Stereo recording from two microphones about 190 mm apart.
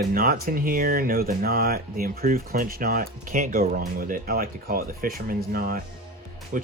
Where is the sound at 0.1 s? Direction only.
50° right (ahead or behind).